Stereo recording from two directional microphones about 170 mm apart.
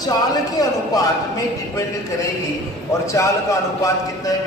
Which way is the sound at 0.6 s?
20° left (ahead or behind).